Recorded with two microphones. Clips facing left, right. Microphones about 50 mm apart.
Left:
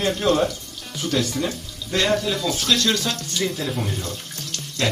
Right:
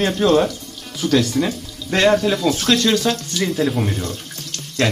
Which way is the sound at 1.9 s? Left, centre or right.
Right.